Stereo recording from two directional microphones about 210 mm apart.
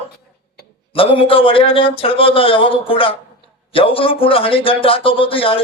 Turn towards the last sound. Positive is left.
turn(degrees=25)  # may be behind; listen again after turning